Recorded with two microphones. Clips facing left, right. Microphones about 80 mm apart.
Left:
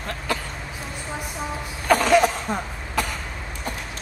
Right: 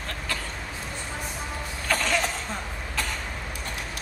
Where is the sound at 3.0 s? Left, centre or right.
Centre.